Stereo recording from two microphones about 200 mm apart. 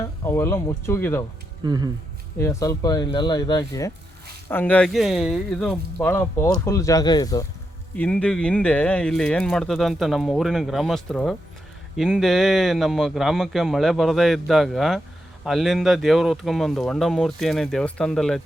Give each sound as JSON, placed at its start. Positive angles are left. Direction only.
{"t": 0.3, "sound": "speech", "side_deg": 10}
{"t": 1.6, "sound": "speech", "side_deg": -20}
{"t": 2.4, "sound": "speech", "side_deg": 15}
{"t": 7.9, "sound": "speech", "side_deg": 5}